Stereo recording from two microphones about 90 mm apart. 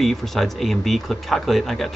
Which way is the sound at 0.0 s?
5° left (ahead or behind).